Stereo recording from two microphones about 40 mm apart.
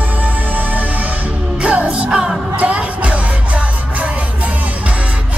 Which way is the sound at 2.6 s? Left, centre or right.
Right.